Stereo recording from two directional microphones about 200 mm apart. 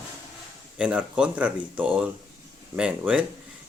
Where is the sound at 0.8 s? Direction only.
5° right (ahead or behind).